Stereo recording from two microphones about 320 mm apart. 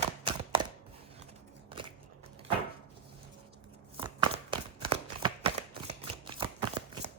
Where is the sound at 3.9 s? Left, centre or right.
Centre.